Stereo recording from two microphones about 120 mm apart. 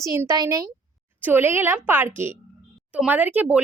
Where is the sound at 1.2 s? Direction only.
20° right (ahead or behind).